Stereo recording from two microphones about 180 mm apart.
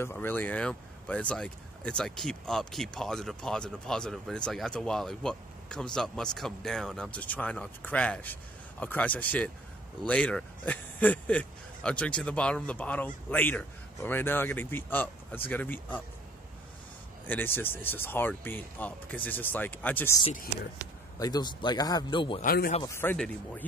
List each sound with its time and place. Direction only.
0.0 s speech: 10° left (ahead or behind)
17.3 s speech: 10° left (ahead or behind)
21.2 s a man's voice: 20° left (ahead or behind)
22.4 s speech: 55° left (ahead or behind)
22.8 s speech: 15° left (ahead or behind)